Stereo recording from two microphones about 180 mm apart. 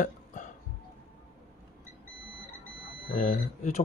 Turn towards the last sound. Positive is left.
turn(degrees=45)  # may be behind; listen again after turning